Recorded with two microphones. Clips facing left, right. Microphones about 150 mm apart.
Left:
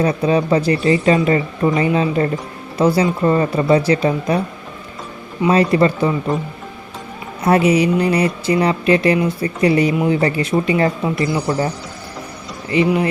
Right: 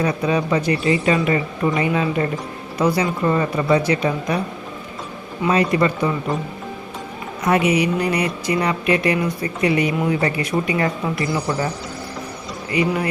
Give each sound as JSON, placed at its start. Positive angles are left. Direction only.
{"t": 0.0, "sound": "speech", "side_deg": 30}
{"t": 5.5, "sound": "speech", "side_deg": 30}
{"t": 7.4, "sound": "speech", "side_deg": 30}
{"t": 12.7, "sound": "speech", "side_deg": 25}